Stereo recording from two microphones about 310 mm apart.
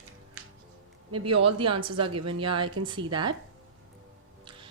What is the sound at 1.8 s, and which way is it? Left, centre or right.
A woman's voice, centre.